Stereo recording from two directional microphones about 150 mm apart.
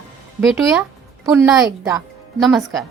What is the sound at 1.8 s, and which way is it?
Music, 20° right (ahead or behind).